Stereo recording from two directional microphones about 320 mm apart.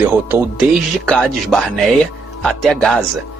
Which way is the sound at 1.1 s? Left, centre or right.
Centre.